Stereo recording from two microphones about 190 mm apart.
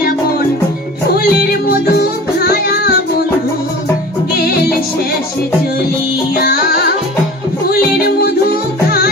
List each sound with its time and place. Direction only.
1.1 s music: 55° left (ahead or behind)
6.3 s music: 50° left (ahead or behind)